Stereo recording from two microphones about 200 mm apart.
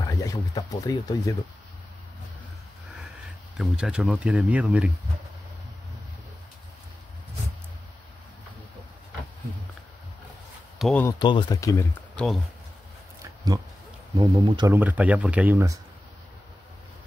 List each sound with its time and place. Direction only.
0.0 s speech: 15° left (ahead or behind)
3.5 s speech: 5° right (ahead or behind)
10.8 s speech: 5° left (ahead or behind)
11.1 s speech: 25° left (ahead or behind)
14.1 s speech: 20° right (ahead or behind)
14.8 s speech: 5° right (ahead or behind)